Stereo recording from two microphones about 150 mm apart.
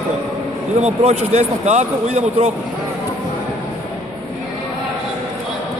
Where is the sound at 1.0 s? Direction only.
50° right (ahead or behind).